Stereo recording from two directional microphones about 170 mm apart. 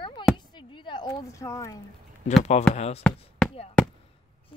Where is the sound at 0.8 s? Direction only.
25° left (ahead or behind).